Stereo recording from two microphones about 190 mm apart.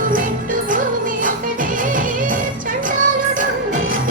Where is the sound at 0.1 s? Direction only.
45° right (ahead or behind).